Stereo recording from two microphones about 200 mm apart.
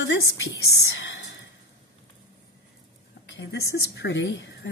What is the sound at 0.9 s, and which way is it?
Whispering, 65° left (ahead or behind).